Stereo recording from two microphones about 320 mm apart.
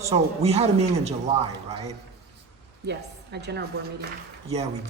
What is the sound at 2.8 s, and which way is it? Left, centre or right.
Speech, right.